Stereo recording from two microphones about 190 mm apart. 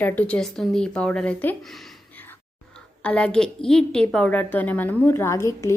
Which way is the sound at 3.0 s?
5° left (ahead or behind).